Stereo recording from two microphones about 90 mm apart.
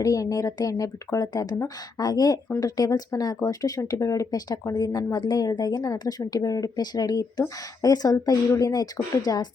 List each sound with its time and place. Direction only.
0.0 s speech: 40° left (ahead or behind)